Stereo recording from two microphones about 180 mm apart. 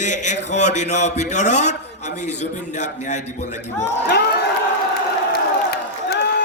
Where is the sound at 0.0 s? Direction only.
40° left (ahead or behind).